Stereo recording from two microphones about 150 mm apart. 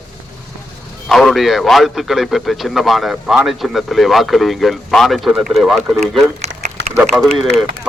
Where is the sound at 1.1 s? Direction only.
Centre (ahead or behind).